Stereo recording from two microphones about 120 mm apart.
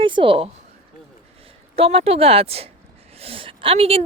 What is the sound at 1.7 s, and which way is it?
A woman's voice, 55° right (ahead or behind).